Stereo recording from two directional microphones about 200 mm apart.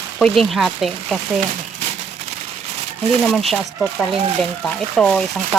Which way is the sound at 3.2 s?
Centre (ahead or behind).